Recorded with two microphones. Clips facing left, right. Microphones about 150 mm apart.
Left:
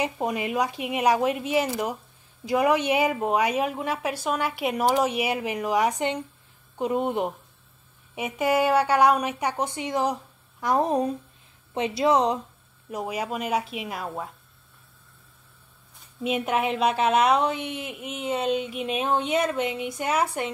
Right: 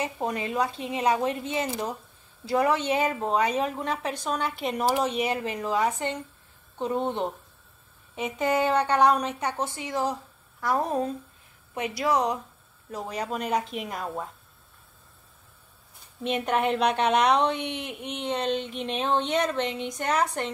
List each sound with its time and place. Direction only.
0.0 s a woman's voice: 15° left (ahead or behind)
12.9 s a woman's voice: 10° left (ahead or behind)
16.2 s a woman's voice: 5° left (ahead or behind)